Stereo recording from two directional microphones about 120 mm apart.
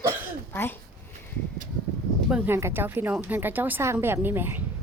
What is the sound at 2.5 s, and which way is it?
Speech, 20° right (ahead or behind).